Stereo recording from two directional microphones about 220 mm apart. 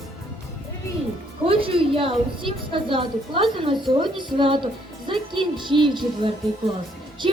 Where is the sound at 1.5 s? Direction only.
25° right (ahead or behind).